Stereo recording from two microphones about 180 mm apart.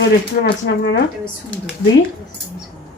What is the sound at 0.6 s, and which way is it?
Speech, 75° left (ahead or behind).